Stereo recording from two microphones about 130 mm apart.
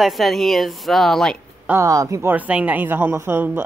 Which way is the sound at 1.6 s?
20° right (ahead or behind).